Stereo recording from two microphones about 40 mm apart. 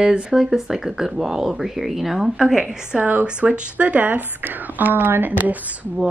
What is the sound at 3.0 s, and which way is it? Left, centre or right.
Speech, right.